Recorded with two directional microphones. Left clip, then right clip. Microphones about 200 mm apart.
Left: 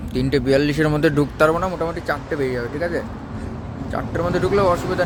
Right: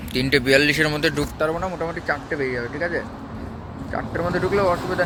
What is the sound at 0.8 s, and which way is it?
Speech, 40° left (ahead or behind).